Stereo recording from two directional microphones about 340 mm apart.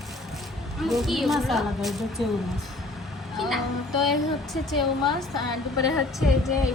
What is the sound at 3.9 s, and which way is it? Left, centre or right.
Speech, left.